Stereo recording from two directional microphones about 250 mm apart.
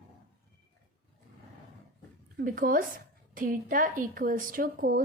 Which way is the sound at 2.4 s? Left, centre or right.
Right.